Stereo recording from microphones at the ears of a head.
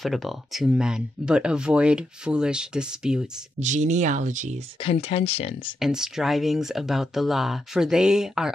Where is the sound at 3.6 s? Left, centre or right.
Right.